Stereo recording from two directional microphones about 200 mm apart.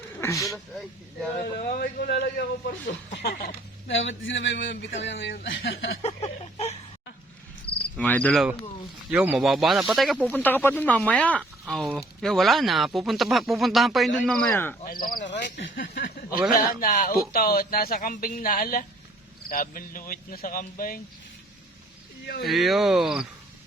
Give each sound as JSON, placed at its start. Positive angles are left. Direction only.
{"t": 0.2, "sound": "speech", "side_deg": 15}
{"t": 1.5, "sound": "speech", "side_deg": 50}
{"t": 3.8, "sound": "speech", "side_deg": 70}
{"t": 6.0, "sound": "a sound", "side_deg": 30}
{"t": 7.9, "sound": "cricket", "side_deg": 5}
{"t": 9.0, "sound": "speech", "side_deg": -5}
{"t": 14.8, "sound": "speech", "side_deg": 45}
{"t": 16.5, "sound": "a man's voice", "side_deg": 40}
{"t": 22.4, "sound": "speech", "side_deg": 0}